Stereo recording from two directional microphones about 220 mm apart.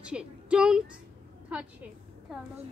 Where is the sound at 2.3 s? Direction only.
Centre (ahead or behind).